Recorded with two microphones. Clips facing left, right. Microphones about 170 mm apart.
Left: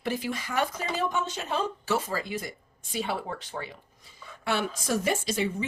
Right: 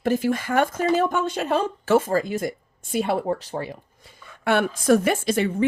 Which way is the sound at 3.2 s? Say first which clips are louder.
Right 10 dB; 40° right (ahead or behind).